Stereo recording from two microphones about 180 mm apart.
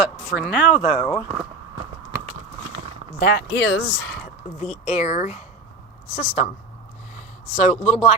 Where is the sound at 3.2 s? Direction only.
65° left (ahead or behind).